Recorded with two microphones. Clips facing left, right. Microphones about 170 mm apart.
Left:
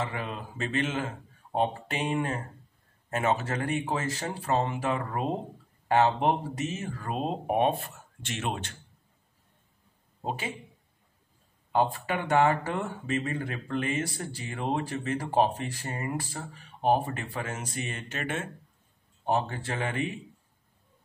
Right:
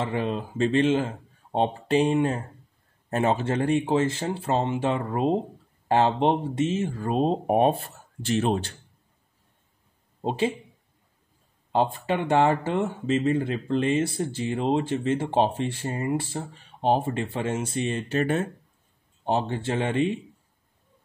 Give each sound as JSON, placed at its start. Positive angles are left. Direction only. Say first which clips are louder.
{"t": 0.0, "sound": "speech", "louder": "right 7 dB", "side_deg": -30}
{"t": 10.2, "sound": "speech", "louder": "right 9 dB", "side_deg": -30}
{"t": 11.7, "sound": "speech", "louder": "right 3 dB", "side_deg": -25}